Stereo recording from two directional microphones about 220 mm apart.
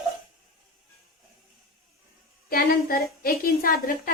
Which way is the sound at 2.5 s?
45° left (ahead or behind).